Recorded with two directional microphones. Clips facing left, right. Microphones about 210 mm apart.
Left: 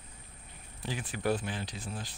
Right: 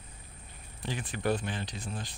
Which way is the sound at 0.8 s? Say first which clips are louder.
Right 1 dB; 5° left (ahead or behind).